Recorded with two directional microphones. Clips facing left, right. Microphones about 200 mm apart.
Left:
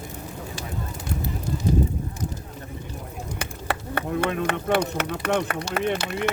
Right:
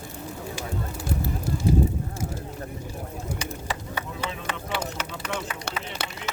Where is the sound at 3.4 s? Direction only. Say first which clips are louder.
Left 2 dB; 60° left (ahead or behind).